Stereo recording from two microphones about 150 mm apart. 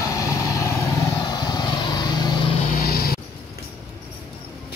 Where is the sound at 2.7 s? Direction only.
90° left.